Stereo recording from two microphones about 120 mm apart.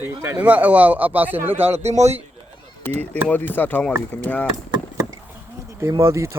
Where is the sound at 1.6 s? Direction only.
60° right (ahead or behind).